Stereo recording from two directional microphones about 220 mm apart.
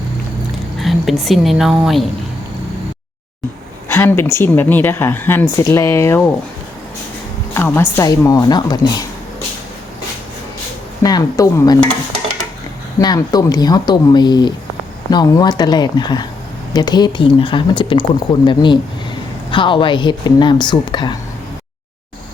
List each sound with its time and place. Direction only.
0.8 s speech: centre (ahead or behind)
3.8 s speech: 10° left (ahead or behind)
7.5 s speech: 10° left (ahead or behind)
11.0 s speech: 15° left (ahead or behind)
13.0 s speech: 15° left (ahead or behind)